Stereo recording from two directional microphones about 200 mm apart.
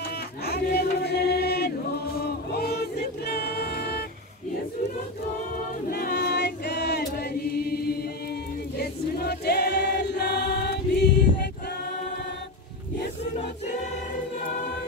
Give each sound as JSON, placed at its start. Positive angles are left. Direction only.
{"t": 0.5, "sound": "choir", "side_deg": 55}
{"t": 2.1, "sound": "music", "side_deg": 50}
{"t": 5.9, "sound": "choir", "side_deg": 50}